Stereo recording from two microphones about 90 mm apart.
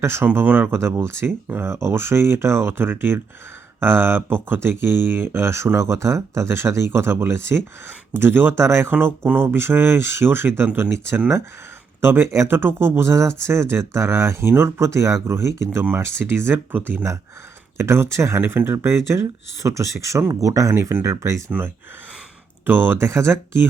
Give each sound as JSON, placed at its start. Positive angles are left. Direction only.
{"t": 0.0, "sound": "speech", "side_deg": -30}
{"t": 0.3, "sound": "speech", "side_deg": -15}
{"t": 0.7, "sound": "speech", "side_deg": -30}
{"t": 22.6, "sound": "speech", "side_deg": -25}